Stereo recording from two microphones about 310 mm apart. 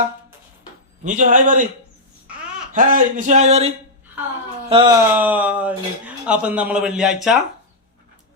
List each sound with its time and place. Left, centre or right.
1.0 s speech: right
2.7 s speech: right
4.7 s speech: centre